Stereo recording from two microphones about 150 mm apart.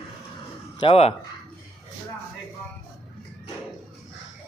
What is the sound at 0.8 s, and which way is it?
Speech, 40° left (ahead or behind).